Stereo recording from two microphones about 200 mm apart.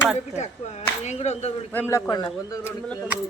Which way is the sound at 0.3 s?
35° left (ahead or behind).